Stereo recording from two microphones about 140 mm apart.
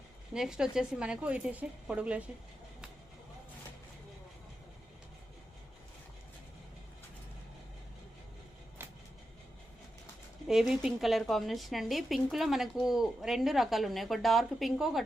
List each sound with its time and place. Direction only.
0.3 s speech: 5° right (ahead or behind)
8.8 s vehicle: 15° right (ahead or behind)
10.4 s speech: 5° right (ahead or behind)